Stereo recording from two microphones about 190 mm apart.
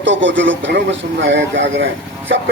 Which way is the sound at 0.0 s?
75° right (ahead or behind).